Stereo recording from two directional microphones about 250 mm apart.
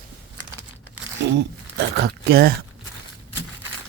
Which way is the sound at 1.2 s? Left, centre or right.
Right.